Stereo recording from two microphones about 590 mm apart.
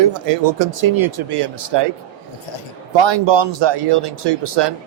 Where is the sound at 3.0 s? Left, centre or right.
Right.